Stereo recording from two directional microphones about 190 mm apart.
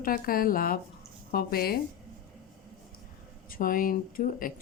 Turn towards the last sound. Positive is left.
turn(degrees=50)  # may be behind; listen again after turning